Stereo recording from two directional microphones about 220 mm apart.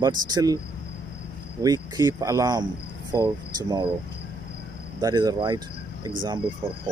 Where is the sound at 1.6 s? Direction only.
15° right (ahead or behind).